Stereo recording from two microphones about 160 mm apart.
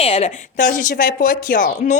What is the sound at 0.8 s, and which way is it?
Speech, 60° left (ahead or behind).